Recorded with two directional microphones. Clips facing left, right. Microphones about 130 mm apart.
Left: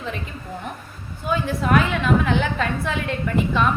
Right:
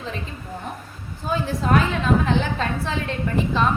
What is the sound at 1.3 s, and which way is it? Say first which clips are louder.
A woman's voice: left 1 dB; 35° right (ahead or behind).